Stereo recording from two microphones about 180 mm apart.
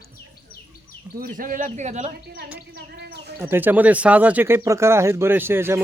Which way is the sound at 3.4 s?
10° right (ahead or behind).